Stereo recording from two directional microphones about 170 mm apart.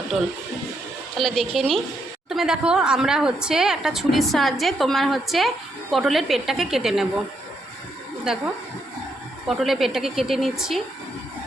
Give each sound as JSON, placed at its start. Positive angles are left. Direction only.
{"t": 1.1, "sound": "a woman's voice", "side_deg": 0}
{"t": 9.5, "sound": "a woman's voice", "side_deg": 0}